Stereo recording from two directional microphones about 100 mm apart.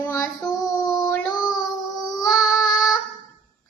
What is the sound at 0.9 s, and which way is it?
Child singing, 10° left (ahead or behind).